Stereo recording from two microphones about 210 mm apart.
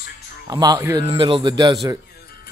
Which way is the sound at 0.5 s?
20° right (ahead or behind).